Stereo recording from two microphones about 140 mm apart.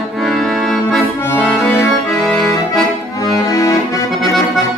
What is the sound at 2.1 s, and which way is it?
Accordion, 5° left (ahead or behind).